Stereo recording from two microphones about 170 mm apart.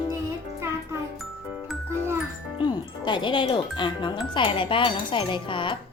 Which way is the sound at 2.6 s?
25° left (ahead or behind).